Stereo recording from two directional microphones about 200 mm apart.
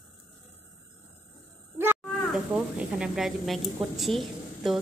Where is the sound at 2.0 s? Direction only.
5° right (ahead or behind).